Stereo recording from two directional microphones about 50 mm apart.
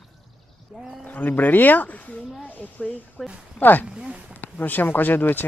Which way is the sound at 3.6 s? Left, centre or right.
Left.